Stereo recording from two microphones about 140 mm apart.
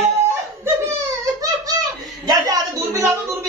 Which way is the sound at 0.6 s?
20° right (ahead or behind).